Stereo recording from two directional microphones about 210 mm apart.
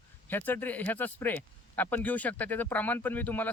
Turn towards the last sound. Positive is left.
turn(degrees=10)  # may be behind; listen again after turning